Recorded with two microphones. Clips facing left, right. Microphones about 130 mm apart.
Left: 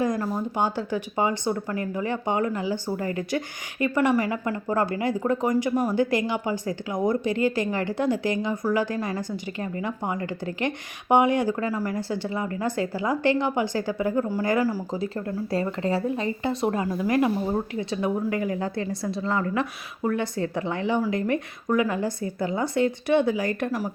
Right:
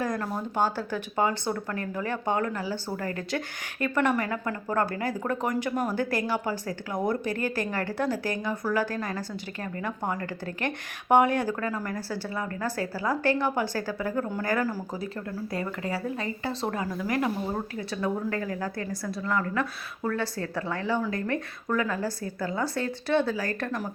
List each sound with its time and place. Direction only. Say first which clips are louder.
0.2 s a woman's voice: left 2 dB; 15° left (ahead or behind)
11.9 s a woman's voice: left 4 dB; 20° left (ahead or behind)
15.8 s a woman's voice: left 6 dB; 25° left (ahead or behind)